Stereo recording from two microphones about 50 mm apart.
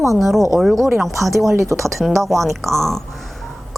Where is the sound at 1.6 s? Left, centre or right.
Right.